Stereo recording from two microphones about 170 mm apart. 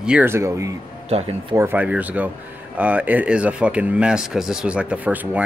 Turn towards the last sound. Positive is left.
turn(degrees=-10)  # may be behind; listen again after turning